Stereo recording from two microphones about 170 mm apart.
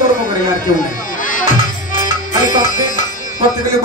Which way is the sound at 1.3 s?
50° left (ahead or behind).